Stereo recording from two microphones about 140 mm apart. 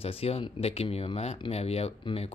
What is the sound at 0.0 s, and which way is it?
Speech, 45° left (ahead or behind).